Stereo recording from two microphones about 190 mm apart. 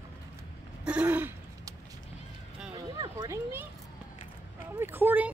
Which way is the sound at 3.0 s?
20° right (ahead or behind).